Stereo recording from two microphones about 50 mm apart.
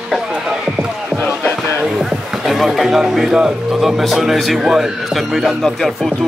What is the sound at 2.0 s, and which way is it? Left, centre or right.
Speech, centre.